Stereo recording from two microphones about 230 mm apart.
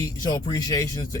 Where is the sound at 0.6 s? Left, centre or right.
Centre.